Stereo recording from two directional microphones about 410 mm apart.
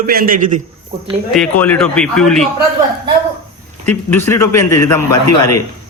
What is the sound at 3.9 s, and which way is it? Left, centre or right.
A man's voice, centre.